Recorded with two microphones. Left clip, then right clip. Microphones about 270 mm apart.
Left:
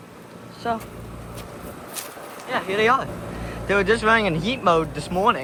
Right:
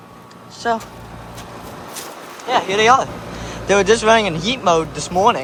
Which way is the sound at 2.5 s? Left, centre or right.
Centre.